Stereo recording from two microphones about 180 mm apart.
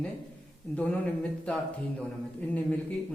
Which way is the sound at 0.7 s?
10° left (ahead or behind).